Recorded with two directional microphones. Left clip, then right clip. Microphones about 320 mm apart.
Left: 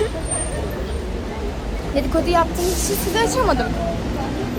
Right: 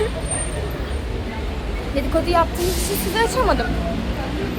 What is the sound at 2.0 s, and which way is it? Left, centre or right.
Speech, centre.